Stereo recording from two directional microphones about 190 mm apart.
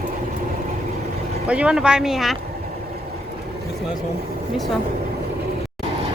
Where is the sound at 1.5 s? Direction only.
5° right (ahead or behind).